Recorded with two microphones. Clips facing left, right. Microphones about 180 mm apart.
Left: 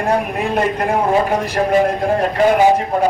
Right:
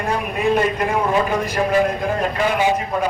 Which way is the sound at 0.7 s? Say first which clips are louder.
Left 3 dB; 45° left (ahead or behind).